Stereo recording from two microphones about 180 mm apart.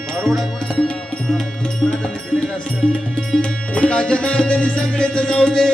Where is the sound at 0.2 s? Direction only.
Centre (ahead or behind).